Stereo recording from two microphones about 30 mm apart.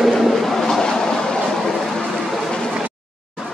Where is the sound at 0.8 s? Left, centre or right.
Left.